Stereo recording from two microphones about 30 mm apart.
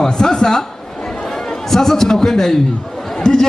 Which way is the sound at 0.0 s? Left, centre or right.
Left.